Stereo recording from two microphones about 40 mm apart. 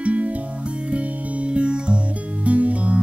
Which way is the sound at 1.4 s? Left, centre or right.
Right.